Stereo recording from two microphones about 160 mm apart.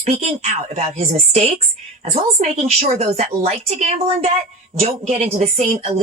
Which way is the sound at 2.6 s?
40° right (ahead or behind).